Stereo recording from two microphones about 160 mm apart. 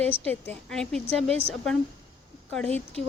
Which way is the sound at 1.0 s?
35° right (ahead or behind).